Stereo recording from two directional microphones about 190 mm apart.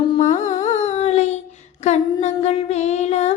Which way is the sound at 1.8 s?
35° left (ahead or behind).